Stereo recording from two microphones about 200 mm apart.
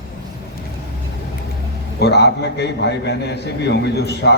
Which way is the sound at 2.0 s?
55° left (ahead or behind).